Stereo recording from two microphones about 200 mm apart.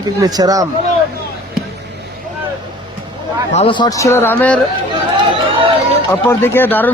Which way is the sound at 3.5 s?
25° left (ahead or behind).